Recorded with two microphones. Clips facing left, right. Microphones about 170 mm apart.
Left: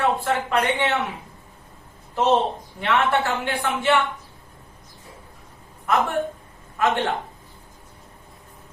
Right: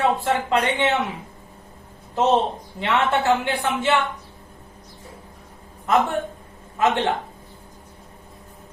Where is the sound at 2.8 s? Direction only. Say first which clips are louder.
Even; 20° right (ahead or behind).